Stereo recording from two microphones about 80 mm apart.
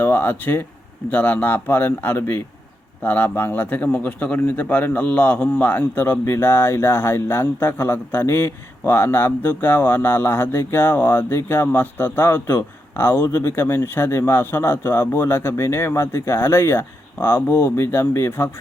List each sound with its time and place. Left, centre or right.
0.0 s a man's voice: left